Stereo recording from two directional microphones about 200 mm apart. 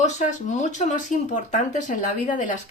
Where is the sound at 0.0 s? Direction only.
35° left (ahead or behind).